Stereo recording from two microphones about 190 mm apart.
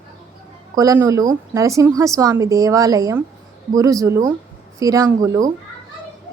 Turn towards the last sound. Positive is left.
turn(degrees=-15)  # may be behind; listen again after turning